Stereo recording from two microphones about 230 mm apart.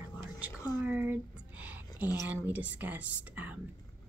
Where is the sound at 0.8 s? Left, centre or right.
Centre.